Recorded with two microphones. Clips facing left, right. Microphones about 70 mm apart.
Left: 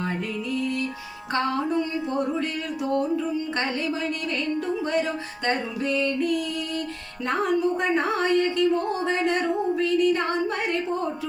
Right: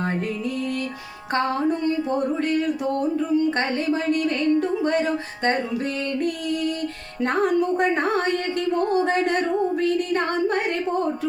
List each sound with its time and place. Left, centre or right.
0.5 s music: right
1.3 s music: right
4.8 s music: right